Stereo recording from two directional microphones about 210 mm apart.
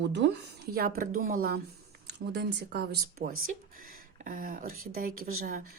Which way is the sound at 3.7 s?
40° right (ahead or behind).